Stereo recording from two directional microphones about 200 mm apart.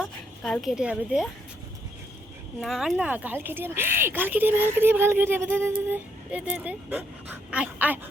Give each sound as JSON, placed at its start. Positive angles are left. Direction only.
{"t": 0.0, "sound": "a woman's voice", "side_deg": 5}
{"t": 2.6, "sound": "speech", "side_deg": 0}